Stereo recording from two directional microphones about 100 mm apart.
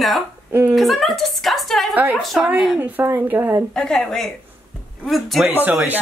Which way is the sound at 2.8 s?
20° right (ahead or behind).